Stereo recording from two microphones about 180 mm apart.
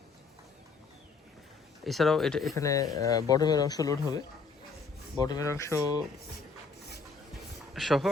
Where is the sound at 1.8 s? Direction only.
Centre (ahead or behind).